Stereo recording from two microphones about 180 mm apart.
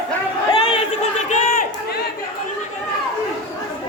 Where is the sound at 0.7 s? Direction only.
40° left (ahead or behind).